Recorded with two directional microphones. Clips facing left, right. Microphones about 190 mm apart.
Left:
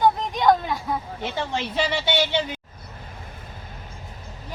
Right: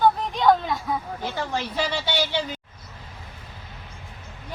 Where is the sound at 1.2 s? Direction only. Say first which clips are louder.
Left 2 dB; 20° left (ahead or behind).